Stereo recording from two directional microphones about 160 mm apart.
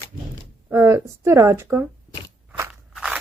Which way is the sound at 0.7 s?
15° right (ahead or behind).